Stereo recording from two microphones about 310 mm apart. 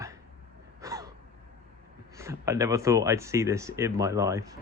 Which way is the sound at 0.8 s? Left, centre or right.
Centre.